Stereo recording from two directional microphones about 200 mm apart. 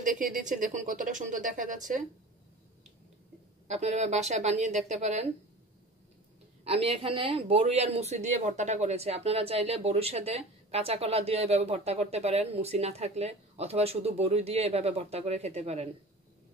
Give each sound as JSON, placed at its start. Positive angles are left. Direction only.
{"t": 0.0, "sound": "a woman's voice", "side_deg": -40}
{"t": 3.6, "sound": "speech", "side_deg": -35}
{"t": 6.6, "sound": "speech", "side_deg": -30}